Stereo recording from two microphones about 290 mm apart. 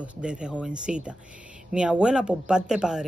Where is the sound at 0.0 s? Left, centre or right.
Centre.